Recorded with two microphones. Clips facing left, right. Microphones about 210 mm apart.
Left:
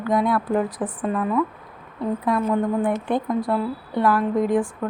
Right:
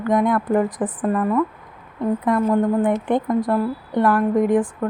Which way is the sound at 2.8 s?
20° right (ahead or behind).